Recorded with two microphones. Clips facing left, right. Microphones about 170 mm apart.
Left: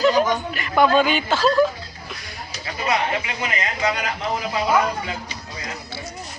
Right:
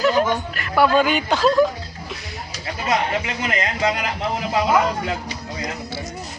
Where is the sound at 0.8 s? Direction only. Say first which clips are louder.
Even; 10° right (ahead or behind).